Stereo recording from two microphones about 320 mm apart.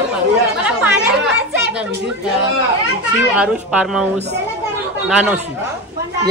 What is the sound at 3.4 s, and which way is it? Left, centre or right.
A woman's voice, centre.